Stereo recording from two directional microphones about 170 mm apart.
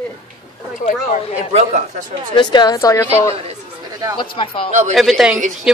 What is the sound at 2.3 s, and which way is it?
Speech, 25° left (ahead or behind).